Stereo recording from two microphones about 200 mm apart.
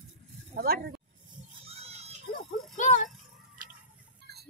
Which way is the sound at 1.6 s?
30° right (ahead or behind).